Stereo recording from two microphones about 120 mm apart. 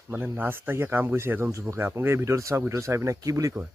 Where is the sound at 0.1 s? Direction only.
15° right (ahead or behind).